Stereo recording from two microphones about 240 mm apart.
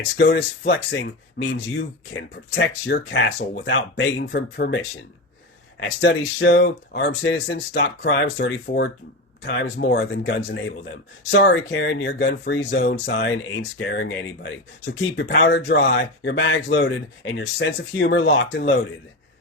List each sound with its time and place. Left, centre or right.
0.2 s speech: left
6.0 s speech: left